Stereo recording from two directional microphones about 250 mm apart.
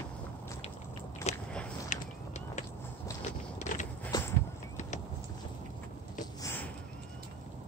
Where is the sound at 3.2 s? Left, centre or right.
Left.